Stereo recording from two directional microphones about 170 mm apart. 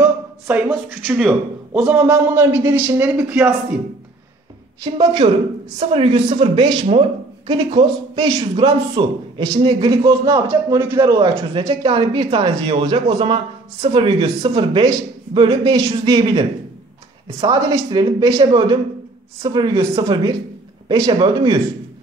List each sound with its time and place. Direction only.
0.0 s a sound: 10° right (ahead or behind)
1.0 s speech: 10° right (ahead or behind)
5.2 s a man's voice: 40° right (ahead or behind); by 11.0 s 15° right (ahead or behind)
11.0 s a woman's voice: 25° right (ahead or behind)